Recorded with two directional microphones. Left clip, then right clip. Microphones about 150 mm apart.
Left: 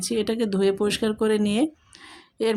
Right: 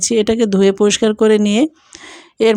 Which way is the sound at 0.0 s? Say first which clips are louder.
Right 11 dB; 50° right (ahead or behind).